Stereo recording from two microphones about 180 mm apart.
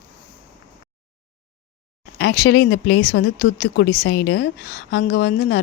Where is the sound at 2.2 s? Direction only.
65° left (ahead or behind).